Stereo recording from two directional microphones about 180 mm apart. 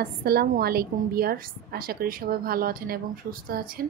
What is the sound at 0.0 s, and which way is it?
A woman's voice, 60° right (ahead or behind).